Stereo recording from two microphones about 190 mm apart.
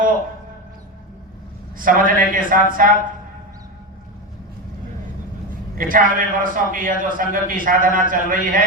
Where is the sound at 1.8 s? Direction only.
45° right (ahead or behind).